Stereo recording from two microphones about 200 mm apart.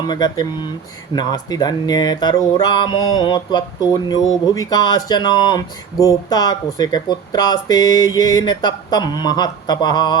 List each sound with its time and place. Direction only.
0.1 s speech: 20° left (ahead or behind)